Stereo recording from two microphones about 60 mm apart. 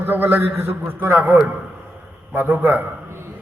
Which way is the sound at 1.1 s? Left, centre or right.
Right.